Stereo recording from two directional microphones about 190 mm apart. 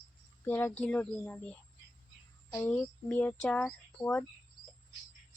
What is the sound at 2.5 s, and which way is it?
Speech, 10° left (ahead or behind).